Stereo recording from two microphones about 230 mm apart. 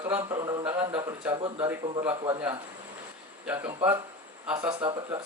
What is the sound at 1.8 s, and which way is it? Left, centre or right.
Speech, right.